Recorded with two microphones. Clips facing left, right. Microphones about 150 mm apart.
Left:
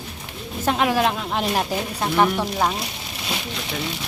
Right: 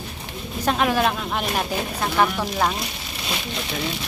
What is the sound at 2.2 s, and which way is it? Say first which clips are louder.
Speech: left 1 dB; 10° left (ahead or behind).